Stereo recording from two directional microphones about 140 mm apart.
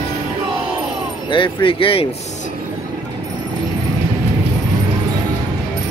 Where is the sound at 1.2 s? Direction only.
35° left (ahead or behind).